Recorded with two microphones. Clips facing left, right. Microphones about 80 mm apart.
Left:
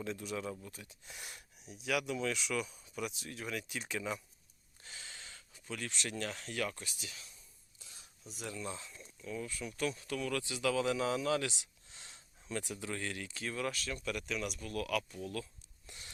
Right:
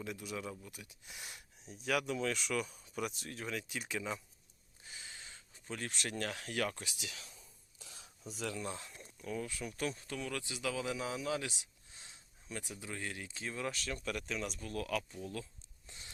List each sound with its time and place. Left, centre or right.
0.0 s speech: centre
1.6 s speech: right
3.5 s speech: right
4.9 s gasp: centre
5.6 s speech: right
5.9 s speech: right
6.8 s speech: right
7.8 s a sound: right
8.6 s speech: right
9.9 s speech: right